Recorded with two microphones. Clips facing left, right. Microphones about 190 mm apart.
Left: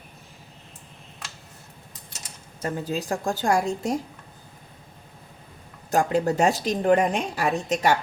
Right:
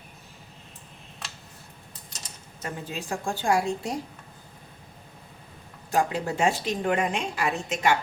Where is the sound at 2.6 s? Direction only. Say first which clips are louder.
Left 6 dB; 35° left (ahead or behind).